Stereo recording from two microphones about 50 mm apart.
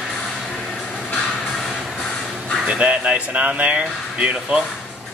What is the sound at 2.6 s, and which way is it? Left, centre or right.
Speech, right.